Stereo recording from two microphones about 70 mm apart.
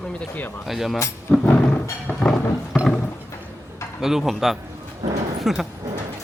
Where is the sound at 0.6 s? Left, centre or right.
Centre.